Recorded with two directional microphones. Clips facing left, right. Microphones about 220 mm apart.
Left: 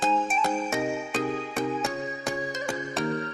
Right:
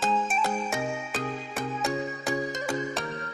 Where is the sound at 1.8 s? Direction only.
Centre (ahead or behind).